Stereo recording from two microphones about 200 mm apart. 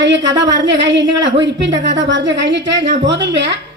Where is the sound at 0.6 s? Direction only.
60° right (ahead or behind).